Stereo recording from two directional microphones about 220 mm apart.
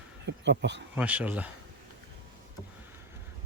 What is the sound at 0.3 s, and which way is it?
Speech, 55° right (ahead or behind).